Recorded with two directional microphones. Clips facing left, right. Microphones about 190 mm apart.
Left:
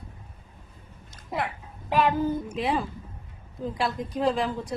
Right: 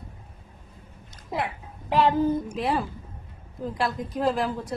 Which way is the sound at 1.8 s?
25° right (ahead or behind).